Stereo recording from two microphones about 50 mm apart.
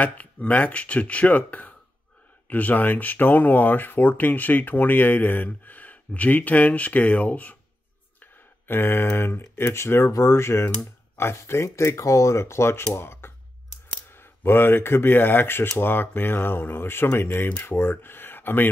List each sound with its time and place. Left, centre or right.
0.0 s speech: left
8.2 s a sound: left
9.6 s speech: left